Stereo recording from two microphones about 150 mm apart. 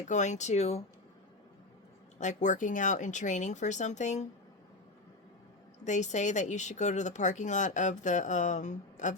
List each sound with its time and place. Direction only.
0.1 s a woman's voice: 55° left (ahead or behind)
2.1 s a woman's voice: 55° left (ahead or behind)
5.8 s a woman's voice: 50° left (ahead or behind)